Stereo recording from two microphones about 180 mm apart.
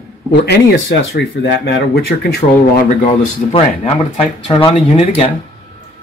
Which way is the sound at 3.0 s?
30° left (ahead or behind).